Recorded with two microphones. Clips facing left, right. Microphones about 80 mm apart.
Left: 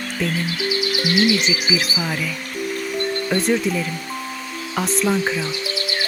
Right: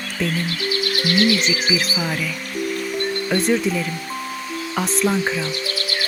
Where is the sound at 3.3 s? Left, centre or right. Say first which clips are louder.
Right 1 dB; centre.